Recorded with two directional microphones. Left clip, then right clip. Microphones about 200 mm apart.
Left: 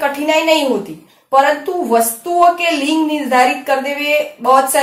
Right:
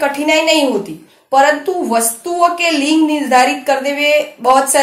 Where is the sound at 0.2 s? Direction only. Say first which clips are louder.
Right 1 dB; 35° right (ahead or behind).